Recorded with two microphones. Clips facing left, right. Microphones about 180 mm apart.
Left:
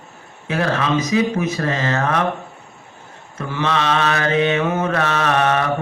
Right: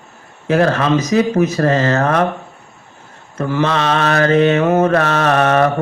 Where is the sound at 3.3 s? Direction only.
45° right (ahead or behind).